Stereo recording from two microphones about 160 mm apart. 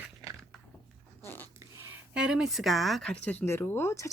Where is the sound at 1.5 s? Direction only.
15° right (ahead or behind).